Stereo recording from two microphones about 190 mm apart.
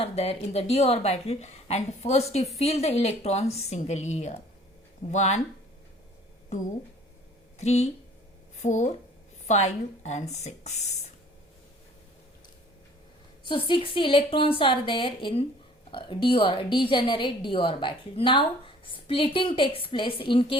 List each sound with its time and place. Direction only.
0.0 s a woman's voice: 30° left (ahead or behind)
7.6 s a woman's voice: 35° left (ahead or behind)
13.5 s a woman's voice: 25° left (ahead or behind)